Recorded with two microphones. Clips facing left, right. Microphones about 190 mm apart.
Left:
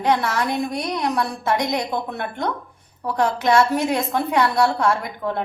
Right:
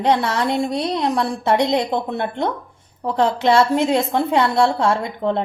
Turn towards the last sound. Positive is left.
turn(degrees=-25)  # may be behind; listen again after turning